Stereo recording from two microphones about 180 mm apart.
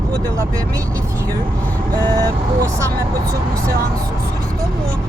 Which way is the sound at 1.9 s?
20° right (ahead or behind).